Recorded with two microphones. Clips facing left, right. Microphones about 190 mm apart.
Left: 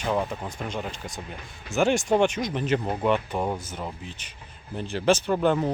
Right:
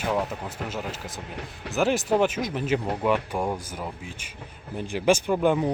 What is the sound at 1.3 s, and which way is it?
Speech, 70° right (ahead or behind).